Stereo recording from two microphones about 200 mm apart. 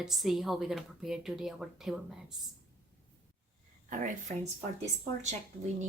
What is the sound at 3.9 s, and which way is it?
Speech, 40° right (ahead or behind).